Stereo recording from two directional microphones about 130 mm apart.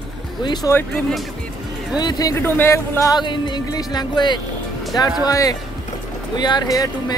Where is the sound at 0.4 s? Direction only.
35° left (ahead or behind).